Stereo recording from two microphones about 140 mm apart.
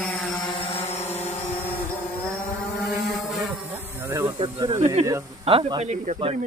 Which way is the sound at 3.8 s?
15° right (ahead or behind).